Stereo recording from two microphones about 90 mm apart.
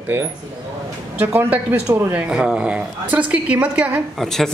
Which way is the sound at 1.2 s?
25° right (ahead or behind).